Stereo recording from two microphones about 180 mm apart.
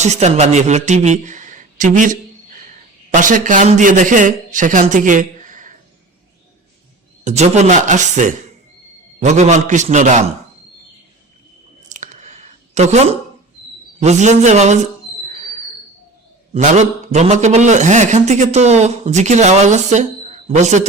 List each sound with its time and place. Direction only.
0.0 s a man's voice: 40° right (ahead or behind)
7.3 s a man's voice: 40° right (ahead or behind)
11.9 s a sound: 40° right (ahead or behind)
14.0 s a man's voice: 40° right (ahead or behind)
15.3 s a sound: 45° right (ahead or behind)
16.5 s a man's voice: 40° right (ahead or behind)